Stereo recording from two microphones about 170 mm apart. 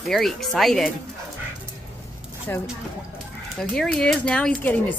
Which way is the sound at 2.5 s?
15° left (ahead or behind).